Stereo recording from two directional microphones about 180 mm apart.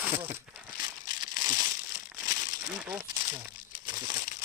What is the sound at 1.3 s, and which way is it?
Crumpling, 20° right (ahead or behind).